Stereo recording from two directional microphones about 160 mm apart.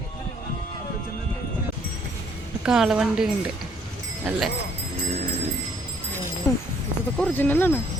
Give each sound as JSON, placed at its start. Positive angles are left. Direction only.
{"t": 2.6, "sound": "a woman's voice", "side_deg": -5}
{"t": 6.5, "sound": "a sound", "side_deg": 20}
{"t": 7.2, "sound": "speech", "side_deg": 10}